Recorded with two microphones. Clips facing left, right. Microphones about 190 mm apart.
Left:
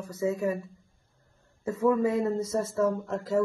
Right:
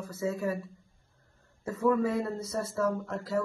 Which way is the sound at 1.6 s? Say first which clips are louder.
Left 2 dB; 20° left (ahead or behind).